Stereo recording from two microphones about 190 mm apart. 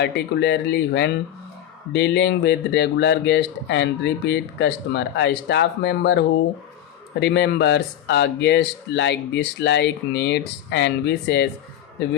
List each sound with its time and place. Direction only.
0.0 s speech: 65° left (ahead or behind)